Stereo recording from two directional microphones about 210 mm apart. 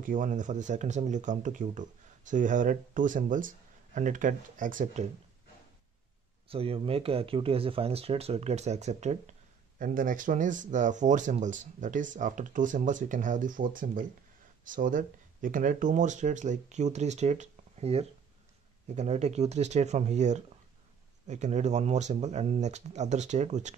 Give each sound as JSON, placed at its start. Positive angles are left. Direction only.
{"t": 0.0, "sound": "speech", "side_deg": -40}
{"t": 6.5, "sound": "speech", "side_deg": -25}